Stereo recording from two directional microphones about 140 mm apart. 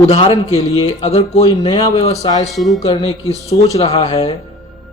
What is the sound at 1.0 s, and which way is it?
Speech, 45° left (ahead or behind).